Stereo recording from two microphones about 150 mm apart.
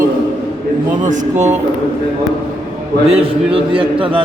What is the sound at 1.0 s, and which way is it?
Speech, 55° right (ahead or behind).